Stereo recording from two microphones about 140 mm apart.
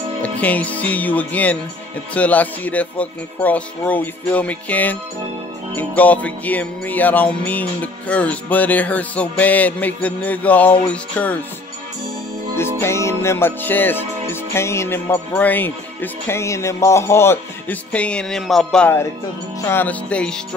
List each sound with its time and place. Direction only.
0.2 s music: 10° left (ahead or behind)
12.5 s music: 20° left (ahead or behind)